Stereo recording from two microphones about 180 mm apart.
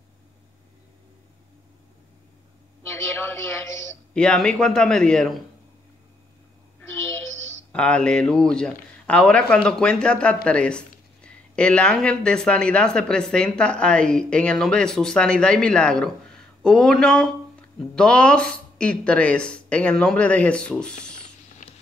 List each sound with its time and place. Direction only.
2.9 s a woman's voice: 15° left (ahead or behind)
6.8 s speech: 15° left (ahead or behind)
21.6 s a sound: 45° left (ahead or behind)